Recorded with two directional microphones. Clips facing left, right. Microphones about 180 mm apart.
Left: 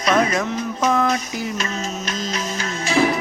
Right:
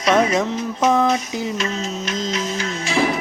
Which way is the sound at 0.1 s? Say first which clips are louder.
Right 2 dB; 25° right (ahead or behind).